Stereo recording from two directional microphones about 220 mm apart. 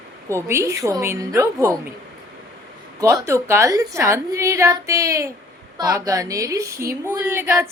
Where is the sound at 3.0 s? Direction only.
10° right (ahead or behind).